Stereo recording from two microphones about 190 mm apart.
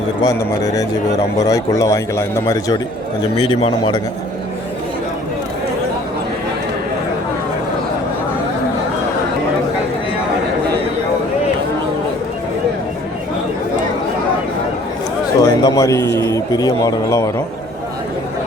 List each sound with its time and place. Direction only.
0.6 s a man's voice: 20° left (ahead or behind)
15.4 s a man's voice: 20° left (ahead or behind)